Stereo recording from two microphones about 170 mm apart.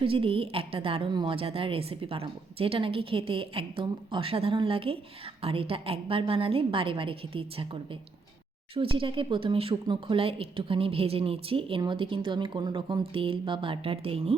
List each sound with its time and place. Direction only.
0.0 s speech: 30° right (ahead or behind)